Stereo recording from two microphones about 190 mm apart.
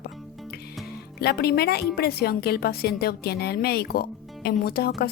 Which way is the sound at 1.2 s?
55° left (ahead or behind).